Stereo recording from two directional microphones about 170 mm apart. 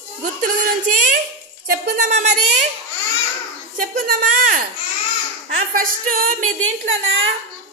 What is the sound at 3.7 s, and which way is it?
Speech, 55° right (ahead or behind).